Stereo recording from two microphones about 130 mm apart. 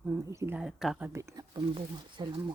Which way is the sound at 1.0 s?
20° right (ahead or behind).